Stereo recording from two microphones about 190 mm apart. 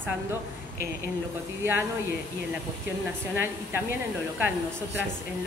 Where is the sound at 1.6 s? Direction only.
10° right (ahead or behind).